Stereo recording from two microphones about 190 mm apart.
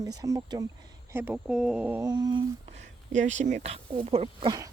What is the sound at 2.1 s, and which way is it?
Speech, 20° right (ahead or behind).